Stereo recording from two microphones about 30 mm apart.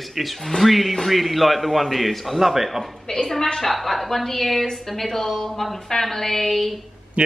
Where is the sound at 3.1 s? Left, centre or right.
Centre.